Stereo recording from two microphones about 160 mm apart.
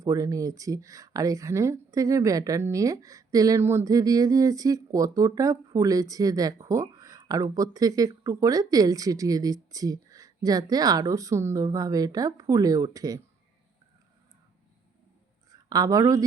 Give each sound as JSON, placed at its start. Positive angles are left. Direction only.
{"t": 0.0, "sound": "speech", "side_deg": -20}
{"t": 15.4, "sound": "a woman's voice", "side_deg": -25}